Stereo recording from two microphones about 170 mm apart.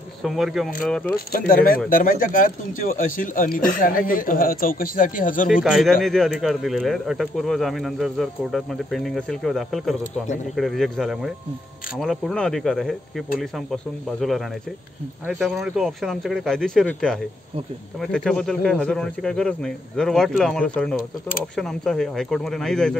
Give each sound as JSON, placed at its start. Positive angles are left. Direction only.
{"t": 0.2, "sound": "speech", "side_deg": 0}
{"t": 1.3, "sound": "speech", "side_deg": 55}
{"t": 5.5, "sound": "speech", "side_deg": 0}